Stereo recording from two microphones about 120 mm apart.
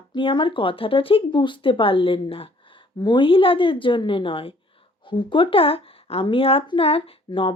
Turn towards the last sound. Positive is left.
turn(degrees=50)  # may be behind; listen again after turning